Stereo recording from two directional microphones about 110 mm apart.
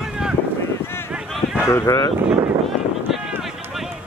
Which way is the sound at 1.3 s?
5° right (ahead or behind).